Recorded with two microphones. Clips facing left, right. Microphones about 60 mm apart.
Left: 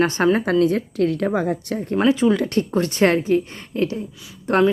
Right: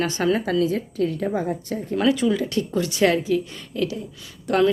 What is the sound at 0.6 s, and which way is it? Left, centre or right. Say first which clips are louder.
Speech: left 4 dB; left.